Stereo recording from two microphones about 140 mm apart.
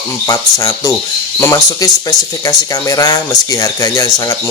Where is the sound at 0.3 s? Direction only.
25° left (ahead or behind).